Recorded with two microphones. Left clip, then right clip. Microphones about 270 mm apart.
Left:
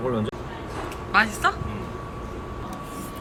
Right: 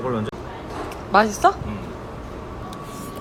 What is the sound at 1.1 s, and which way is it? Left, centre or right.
Speech, centre.